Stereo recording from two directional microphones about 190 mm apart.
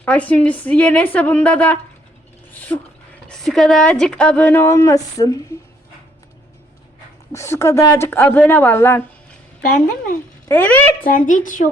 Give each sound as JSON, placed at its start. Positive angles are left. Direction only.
{"t": 0.0, "sound": "a woman's voice", "side_deg": 5}
{"t": 2.5, "sound": "a sound", "side_deg": 10}
{"t": 3.2, "sound": "speech", "side_deg": 0}
{"t": 7.3, "sound": "a woman's voice", "side_deg": 15}
{"t": 10.5, "sound": "a woman's voice", "side_deg": 10}
{"t": 11.0, "sound": "speech", "side_deg": 45}